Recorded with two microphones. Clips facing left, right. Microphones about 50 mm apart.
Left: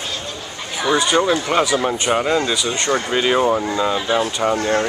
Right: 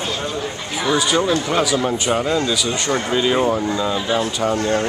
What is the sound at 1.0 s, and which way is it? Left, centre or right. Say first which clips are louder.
Speech: left 1 dB; centre.